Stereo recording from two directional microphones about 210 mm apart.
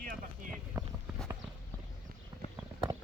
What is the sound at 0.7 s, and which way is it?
Clip-clop, 15° right (ahead or behind).